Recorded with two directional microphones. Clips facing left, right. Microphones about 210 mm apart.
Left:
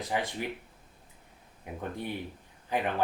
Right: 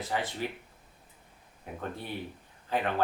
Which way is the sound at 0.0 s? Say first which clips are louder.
Left 1 dB; 15° left (ahead or behind).